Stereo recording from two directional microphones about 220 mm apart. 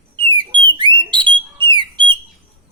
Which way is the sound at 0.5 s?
20° right (ahead or behind).